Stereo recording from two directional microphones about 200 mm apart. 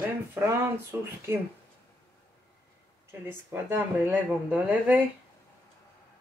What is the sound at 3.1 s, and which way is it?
Speech, 10° right (ahead or behind).